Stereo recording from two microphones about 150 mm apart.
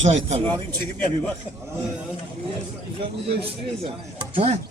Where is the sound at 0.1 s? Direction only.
50° right (ahead or behind).